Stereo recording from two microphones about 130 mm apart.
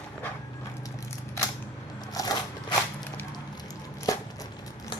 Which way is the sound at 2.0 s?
30° left (ahead or behind).